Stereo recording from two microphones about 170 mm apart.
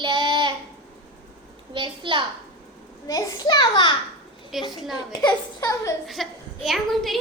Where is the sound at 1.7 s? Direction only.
30° right (ahead or behind).